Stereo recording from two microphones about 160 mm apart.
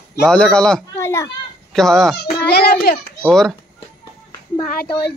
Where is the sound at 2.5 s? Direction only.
80° left.